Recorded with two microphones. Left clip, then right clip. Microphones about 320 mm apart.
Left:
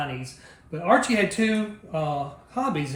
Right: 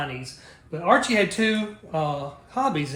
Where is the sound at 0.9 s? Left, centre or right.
Centre.